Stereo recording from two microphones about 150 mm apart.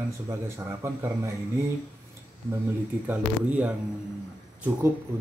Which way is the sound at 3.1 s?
10° right (ahead or behind).